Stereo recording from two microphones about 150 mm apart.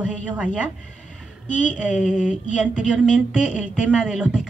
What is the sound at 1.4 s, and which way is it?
Speech, 55° left (ahead or behind).